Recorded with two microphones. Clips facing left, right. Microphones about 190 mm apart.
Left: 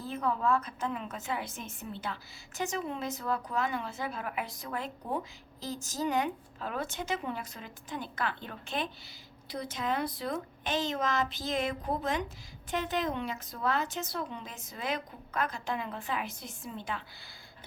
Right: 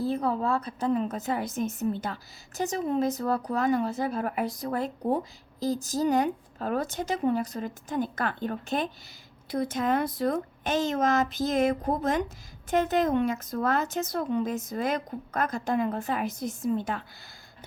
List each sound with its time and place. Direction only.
0.0 s a woman's voice: 35° right (ahead or behind)